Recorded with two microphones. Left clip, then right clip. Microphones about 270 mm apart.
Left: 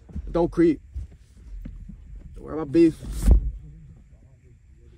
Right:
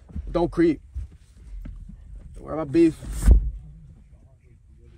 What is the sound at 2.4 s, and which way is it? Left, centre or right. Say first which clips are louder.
Speech: even; centre.